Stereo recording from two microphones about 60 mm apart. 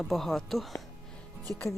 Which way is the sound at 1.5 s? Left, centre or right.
Left.